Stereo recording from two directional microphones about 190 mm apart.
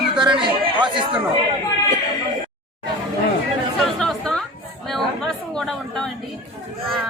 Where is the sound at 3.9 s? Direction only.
5° left (ahead or behind).